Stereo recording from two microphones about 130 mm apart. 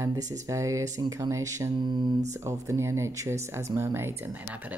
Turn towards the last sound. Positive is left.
turn(degrees=-20)  # may be behind; listen again after turning